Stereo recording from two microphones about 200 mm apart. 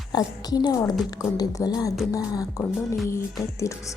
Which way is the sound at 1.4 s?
20° left (ahead or behind).